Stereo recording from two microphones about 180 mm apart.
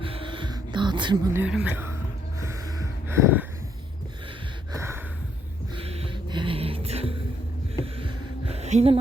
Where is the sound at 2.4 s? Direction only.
15° right (ahead or behind).